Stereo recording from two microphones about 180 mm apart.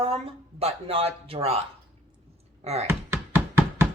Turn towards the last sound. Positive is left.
turn(degrees=-15)  # may be behind; listen again after turning